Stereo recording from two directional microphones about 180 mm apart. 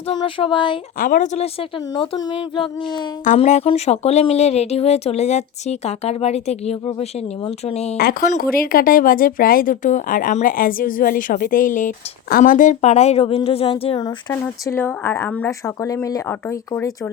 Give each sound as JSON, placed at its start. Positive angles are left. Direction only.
{"t": 0.3, "sound": "child singing", "side_deg": 30}
{"t": 0.9, "sound": "speech", "side_deg": 50}
{"t": 2.0, "sound": "child singing", "side_deg": 25}
{"t": 3.2, "sound": "speech", "side_deg": 40}
{"t": 7.9, "sound": "speech", "side_deg": 55}
{"t": 14.4, "sound": "speech", "side_deg": 10}